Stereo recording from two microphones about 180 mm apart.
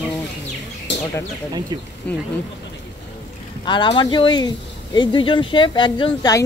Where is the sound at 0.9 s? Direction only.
75° left (ahead or behind).